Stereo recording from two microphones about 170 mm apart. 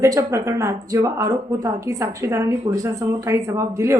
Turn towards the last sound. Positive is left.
turn(degrees=-15)  # may be behind; listen again after turning